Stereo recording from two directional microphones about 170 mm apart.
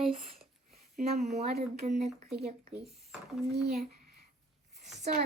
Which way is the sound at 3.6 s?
65° right (ahead or behind).